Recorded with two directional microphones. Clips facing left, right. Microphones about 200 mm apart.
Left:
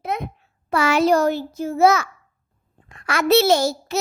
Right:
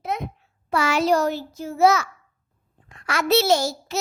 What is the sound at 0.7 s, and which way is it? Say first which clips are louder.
A child's voice: left 3 dB; 55° left (ahead or behind).